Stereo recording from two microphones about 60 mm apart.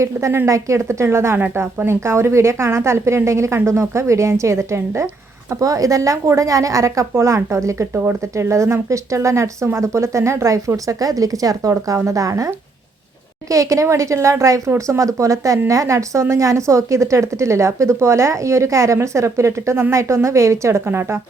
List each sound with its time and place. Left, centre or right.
0.0 s a woman's voice: right
5.5 s a woman's voice: right
7.1 s a woman's voice: right
12.0 s a woman's voice: right
13.5 s a woman's voice: right
20.8 s speech: right